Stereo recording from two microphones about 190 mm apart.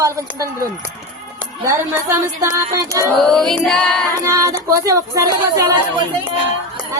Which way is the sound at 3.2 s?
Centre (ahead or behind).